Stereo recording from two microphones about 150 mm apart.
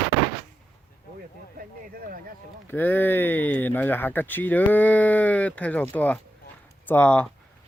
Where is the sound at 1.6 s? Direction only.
80° right.